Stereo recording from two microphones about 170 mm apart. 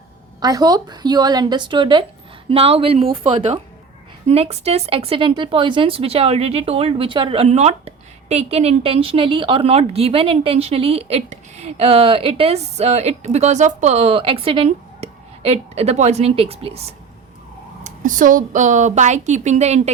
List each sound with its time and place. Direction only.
0.3 s speech: 25° right (ahead or behind)
17.8 s a woman's voice: 50° right (ahead or behind)